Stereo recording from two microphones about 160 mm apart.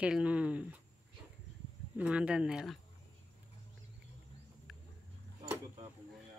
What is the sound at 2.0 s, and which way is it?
Speech, 5° right (ahead or behind).